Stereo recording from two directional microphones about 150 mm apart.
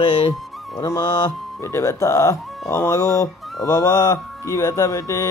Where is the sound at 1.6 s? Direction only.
20° left (ahead or behind).